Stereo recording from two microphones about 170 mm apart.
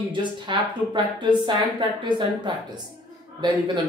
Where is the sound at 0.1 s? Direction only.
30° right (ahead or behind).